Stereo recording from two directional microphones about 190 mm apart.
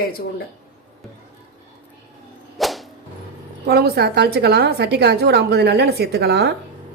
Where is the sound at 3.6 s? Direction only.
60° right (ahead or behind).